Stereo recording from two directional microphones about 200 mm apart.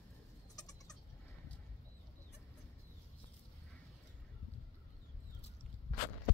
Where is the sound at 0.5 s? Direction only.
20° left (ahead or behind).